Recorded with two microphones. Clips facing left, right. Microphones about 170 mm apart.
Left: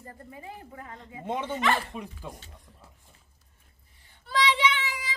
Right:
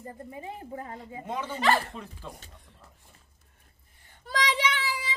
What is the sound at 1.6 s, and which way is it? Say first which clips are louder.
Speech: right 3 dB; 40° right (ahead or behind).